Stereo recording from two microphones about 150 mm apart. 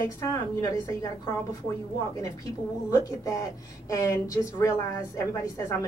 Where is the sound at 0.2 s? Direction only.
25° left (ahead or behind).